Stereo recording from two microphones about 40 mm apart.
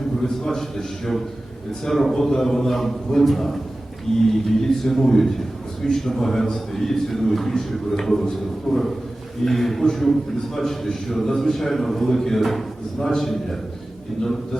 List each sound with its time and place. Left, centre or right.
0.4 s a man's voice: centre